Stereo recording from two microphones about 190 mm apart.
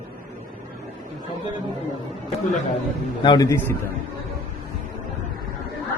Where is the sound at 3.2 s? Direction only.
20° left (ahead or behind).